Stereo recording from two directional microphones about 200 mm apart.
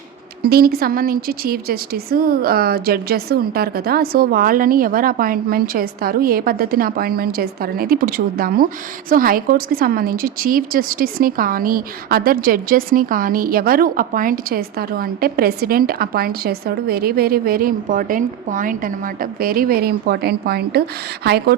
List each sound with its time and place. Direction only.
0.4 s speech: 50° right (ahead or behind)